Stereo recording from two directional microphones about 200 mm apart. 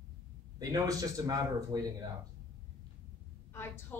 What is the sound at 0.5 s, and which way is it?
A man's voice, 15° right (ahead or behind).